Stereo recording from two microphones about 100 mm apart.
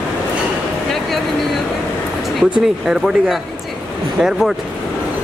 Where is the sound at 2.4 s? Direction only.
5° right (ahead or behind).